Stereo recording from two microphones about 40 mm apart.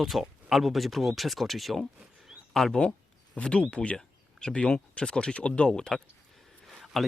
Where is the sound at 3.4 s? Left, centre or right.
Left.